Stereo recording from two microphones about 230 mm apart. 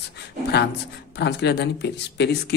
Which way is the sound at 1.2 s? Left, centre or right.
Left.